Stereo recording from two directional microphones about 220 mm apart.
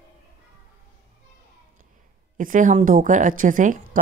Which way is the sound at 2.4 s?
35° right (ahead or behind).